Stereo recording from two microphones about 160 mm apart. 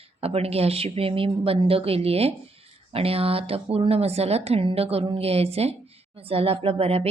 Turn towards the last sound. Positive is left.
turn(degrees=-40)  # may be behind; listen again after turning